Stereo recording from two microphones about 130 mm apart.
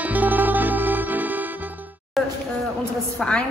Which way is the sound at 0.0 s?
15° right (ahead or behind).